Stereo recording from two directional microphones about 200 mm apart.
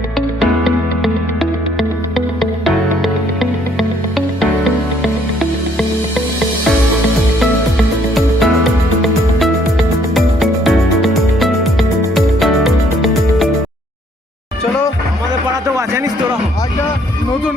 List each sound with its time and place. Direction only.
0.3 s music: centre (ahead or behind)
10.2 s music: centre (ahead or behind)